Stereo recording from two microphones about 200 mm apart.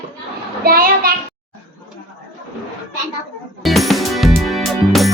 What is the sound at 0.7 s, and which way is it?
Speech, 45° right (ahead or behind).